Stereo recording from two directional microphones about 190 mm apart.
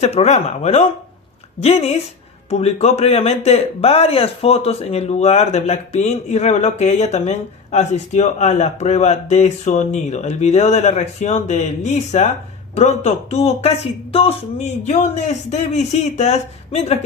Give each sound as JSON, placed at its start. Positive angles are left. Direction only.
{"t": 0.0, "sound": "speech", "side_deg": 35}